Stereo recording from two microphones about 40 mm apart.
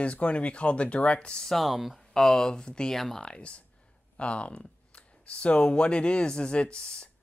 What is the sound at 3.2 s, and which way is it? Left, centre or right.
Speech, left.